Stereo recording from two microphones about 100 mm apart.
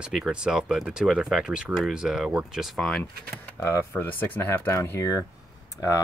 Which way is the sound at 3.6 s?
25° left (ahead or behind).